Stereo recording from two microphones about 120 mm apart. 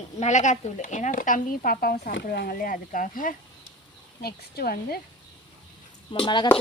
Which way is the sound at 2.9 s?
90° left.